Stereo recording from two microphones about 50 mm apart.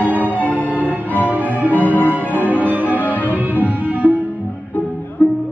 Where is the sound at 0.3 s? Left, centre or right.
Left.